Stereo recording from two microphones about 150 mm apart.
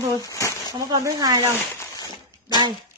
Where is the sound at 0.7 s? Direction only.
25° right (ahead or behind).